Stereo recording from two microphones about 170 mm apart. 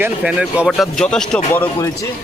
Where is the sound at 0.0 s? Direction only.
5° right (ahead or behind).